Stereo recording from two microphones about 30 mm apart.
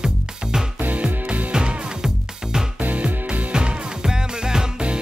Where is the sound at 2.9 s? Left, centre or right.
Right.